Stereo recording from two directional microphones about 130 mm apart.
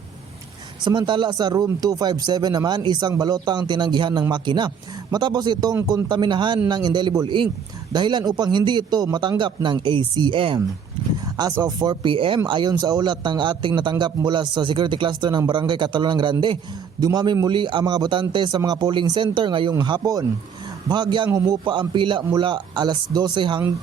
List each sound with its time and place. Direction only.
0.9 s speech: 35° right (ahead or behind)
11.6 s speech: 30° right (ahead or behind)